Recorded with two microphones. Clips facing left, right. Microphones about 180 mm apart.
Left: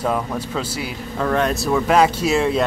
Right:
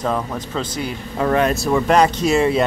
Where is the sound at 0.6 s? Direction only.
5° left (ahead or behind).